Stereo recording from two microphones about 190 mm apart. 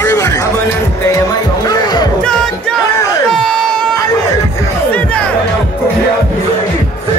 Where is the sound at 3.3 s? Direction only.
Centre (ahead or behind).